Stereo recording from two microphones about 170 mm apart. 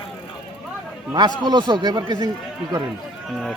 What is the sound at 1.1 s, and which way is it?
A man's voice, 25° right (ahead or behind).